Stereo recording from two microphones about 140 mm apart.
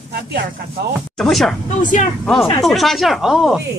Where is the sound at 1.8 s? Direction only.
65° left (ahead or behind).